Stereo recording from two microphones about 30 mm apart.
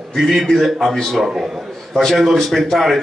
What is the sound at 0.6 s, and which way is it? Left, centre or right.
Speech, centre.